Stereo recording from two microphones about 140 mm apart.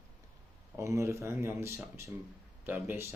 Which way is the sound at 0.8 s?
20° right (ahead or behind).